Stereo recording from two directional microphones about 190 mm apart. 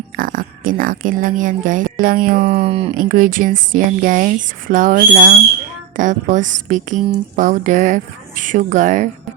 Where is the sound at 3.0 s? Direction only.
45° right (ahead or behind).